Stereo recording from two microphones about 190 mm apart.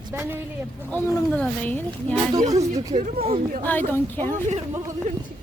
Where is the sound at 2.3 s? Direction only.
20° right (ahead or behind).